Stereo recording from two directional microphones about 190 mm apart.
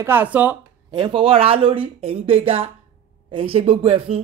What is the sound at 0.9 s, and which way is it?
Speech, 25° right (ahead or behind).